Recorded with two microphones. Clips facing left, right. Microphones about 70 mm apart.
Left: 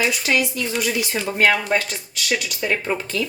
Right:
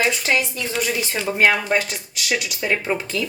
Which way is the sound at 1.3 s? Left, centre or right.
Centre.